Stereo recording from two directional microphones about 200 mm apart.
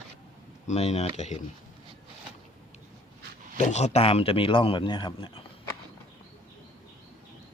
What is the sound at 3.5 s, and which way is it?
A man's voice, 35° left (ahead or behind).